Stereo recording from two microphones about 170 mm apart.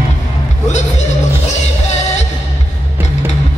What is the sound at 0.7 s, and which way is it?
Music, 45° left (ahead or behind).